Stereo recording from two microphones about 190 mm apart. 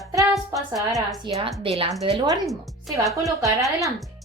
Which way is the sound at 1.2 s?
25° right (ahead or behind).